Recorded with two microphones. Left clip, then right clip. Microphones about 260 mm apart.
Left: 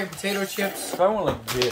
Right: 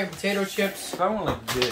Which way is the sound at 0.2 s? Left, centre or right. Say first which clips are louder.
Right 1 dB; centre.